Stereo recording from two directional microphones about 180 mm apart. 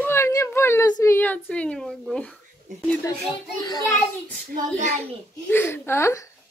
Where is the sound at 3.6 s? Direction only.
20° left (ahead or behind).